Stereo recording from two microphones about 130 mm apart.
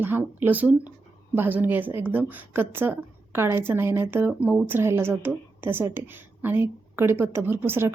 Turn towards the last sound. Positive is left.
turn(degrees=-15)  # may be behind; listen again after turning